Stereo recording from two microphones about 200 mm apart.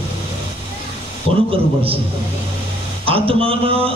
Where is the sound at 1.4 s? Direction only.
30° right (ahead or behind).